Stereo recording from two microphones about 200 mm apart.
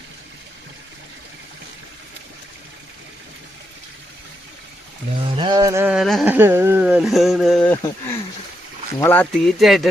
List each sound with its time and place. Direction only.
5.4 s a sound: 20° right (ahead or behind)
5.9 s speech: centre (ahead or behind)
9.0 s speech: 10° left (ahead or behind)